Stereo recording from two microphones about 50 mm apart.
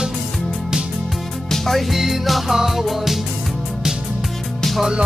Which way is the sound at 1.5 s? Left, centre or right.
Centre.